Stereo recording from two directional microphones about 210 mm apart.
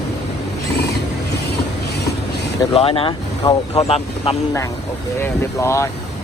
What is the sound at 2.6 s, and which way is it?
Speech, 25° left (ahead or behind).